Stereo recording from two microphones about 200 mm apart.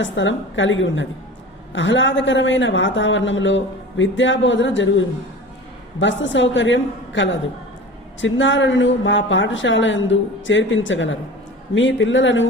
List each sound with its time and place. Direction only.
0.0 s a man's voice: 70° left (ahead or behind)